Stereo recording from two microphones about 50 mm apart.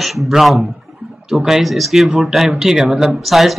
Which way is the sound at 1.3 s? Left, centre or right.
Centre.